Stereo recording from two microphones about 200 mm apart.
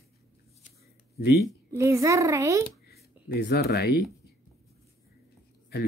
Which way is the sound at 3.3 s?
55° left (ahead or behind).